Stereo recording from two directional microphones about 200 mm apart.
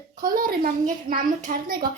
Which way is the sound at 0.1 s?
45° right (ahead or behind).